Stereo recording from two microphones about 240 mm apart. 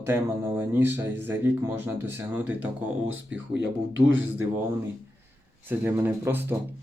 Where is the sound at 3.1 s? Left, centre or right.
Right.